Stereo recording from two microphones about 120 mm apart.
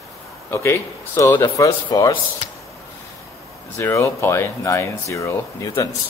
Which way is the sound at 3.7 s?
25° left (ahead or behind).